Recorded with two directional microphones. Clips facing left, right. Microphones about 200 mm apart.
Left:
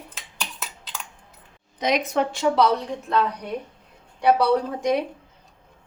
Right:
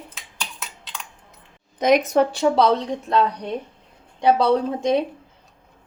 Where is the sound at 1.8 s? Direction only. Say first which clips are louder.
Right 6 dB; 50° right (ahead or behind).